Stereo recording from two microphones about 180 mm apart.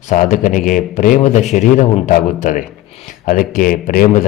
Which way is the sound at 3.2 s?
50° left (ahead or behind).